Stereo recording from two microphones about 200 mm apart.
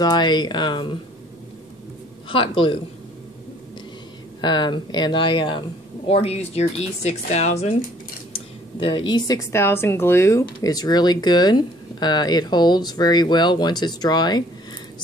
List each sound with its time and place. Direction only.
0.0 s speech: 20° left (ahead or behind)
2.2 s speech: 25° left (ahead or behind)
4.4 s speech: 20° left (ahead or behind)
8.7 s speech: 25° left (ahead or behind)